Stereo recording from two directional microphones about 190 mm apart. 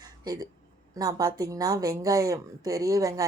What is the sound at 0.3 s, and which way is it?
A woman's voice, 20° right (ahead or behind).